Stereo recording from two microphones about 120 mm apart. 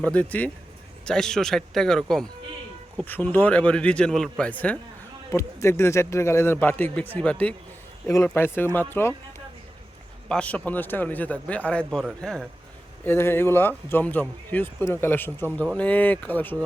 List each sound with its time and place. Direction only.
0.0 s a man's voice: 10° left (ahead or behind)
5.3 s speech: 25° left (ahead or behind)
8.0 s speech: 20° left (ahead or behind)
10.2 s a man's voice: 10° left (ahead or behind)
13.1 s speech: 20° left (ahead or behind)